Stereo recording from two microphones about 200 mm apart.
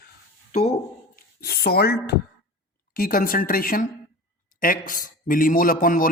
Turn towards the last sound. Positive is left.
turn(degrees=45)  # may be behind; listen again after turning